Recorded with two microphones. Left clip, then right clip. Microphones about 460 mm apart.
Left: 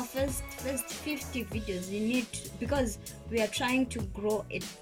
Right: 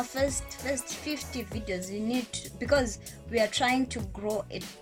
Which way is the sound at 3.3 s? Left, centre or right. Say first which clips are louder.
Right 4 dB; centre.